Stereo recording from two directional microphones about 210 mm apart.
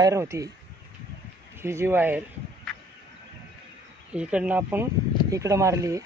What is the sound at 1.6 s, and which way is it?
Speech, 10° right (ahead or behind).